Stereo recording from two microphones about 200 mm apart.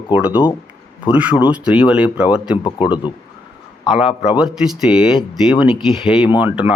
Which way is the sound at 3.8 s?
5° right (ahead or behind).